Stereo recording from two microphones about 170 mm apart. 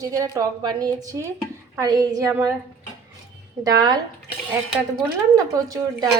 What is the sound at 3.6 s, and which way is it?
Speech, 20° right (ahead or behind).